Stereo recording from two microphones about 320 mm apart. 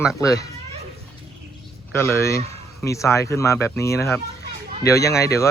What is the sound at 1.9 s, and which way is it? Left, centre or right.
Speech, centre.